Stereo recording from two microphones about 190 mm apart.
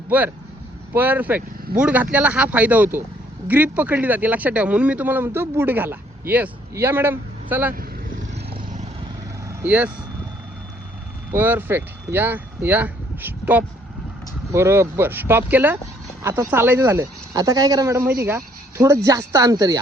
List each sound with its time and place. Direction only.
0.1 s speech: 10° right (ahead or behind)
9.5 s speech: 10° right (ahead or behind)
11.3 s speech: 10° right (ahead or behind)